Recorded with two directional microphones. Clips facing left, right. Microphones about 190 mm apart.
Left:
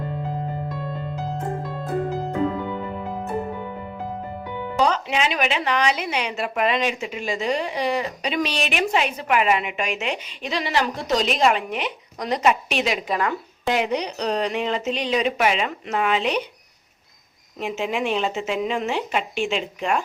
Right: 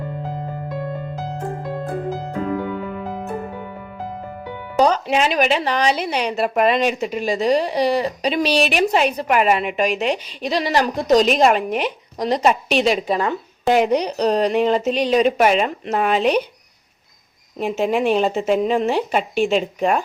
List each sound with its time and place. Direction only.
4.8 s a woman's voice: 40° right (ahead or behind)
13.7 s a woman's voice: 45° right (ahead or behind)
17.6 s a woman's voice: 40° right (ahead or behind)